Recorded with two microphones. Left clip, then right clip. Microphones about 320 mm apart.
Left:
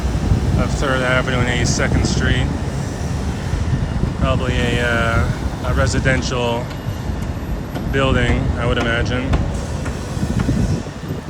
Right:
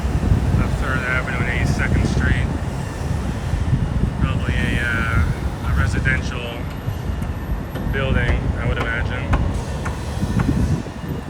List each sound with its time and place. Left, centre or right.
0.9 s speech: centre
4.2 s speech: centre
7.9 s speech: centre